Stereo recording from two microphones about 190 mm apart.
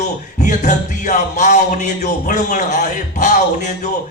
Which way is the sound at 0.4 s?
40° left (ahead or behind).